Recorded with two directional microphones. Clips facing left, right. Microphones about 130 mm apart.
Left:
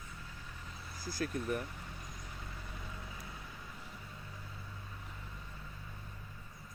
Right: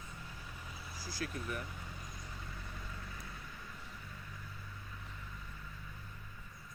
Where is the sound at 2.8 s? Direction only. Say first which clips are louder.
Left 1 dB; 20° left (ahead or behind).